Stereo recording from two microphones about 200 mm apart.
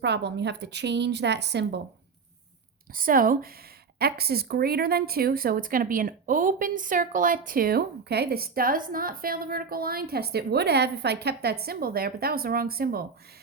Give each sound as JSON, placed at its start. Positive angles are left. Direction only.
{"t": 0.0, "sound": "a woman's voice", "side_deg": -60}
{"t": 2.9, "sound": "a woman's voice", "side_deg": -45}